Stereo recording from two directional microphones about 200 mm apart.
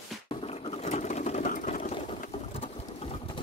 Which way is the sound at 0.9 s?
35° left (ahead or behind).